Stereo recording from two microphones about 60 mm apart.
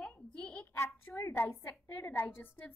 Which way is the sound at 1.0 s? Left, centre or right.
Left.